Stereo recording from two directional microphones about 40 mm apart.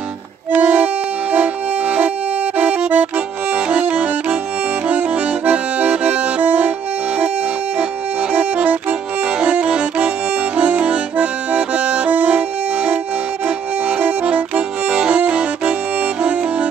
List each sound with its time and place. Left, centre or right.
0.5 s music: right
1.3 s accordion: right
2.5 s music: right
3.9 s accordion: right
8.3 s accordion: right
9.4 s music: right
10.6 s accordion: right
16.2 s music: right